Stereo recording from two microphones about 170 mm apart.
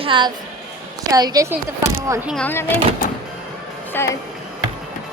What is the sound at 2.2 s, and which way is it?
Speech, 5° left (ahead or behind).